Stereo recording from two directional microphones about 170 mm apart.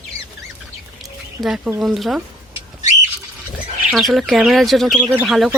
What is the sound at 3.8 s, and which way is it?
Speech, centre (ahead or behind).